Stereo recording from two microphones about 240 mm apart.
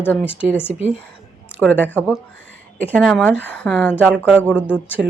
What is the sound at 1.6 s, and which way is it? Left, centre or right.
A woman's voice, centre.